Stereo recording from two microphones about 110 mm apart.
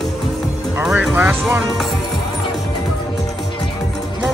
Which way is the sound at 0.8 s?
10° right (ahead or behind).